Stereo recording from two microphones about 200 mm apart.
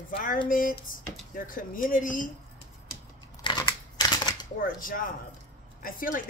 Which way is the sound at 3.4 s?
20° left (ahead or behind).